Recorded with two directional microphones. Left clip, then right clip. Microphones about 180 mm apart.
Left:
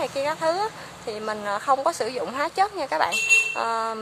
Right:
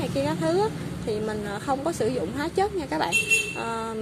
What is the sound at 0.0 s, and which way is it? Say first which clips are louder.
Speech: left 2 dB; 10° left (ahead or behind).